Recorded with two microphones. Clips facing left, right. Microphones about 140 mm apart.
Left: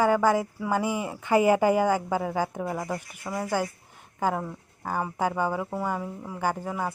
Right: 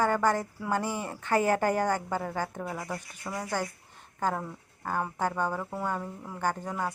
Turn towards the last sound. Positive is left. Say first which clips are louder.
# left 2 dB
turn(degrees=5)  # may be behind; listen again after turning